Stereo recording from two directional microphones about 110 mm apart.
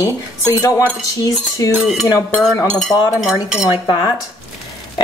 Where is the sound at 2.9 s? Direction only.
30° left (ahead or behind).